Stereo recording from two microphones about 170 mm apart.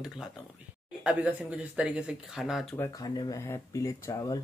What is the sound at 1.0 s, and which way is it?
Speech, 5° right (ahead or behind).